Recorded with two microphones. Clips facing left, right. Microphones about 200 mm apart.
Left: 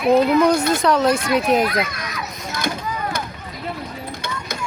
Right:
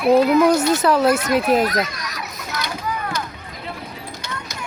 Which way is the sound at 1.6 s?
40° right (ahead or behind).